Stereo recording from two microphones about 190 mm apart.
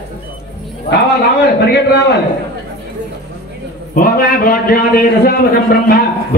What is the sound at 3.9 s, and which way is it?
A man's voice, 50° left (ahead or behind).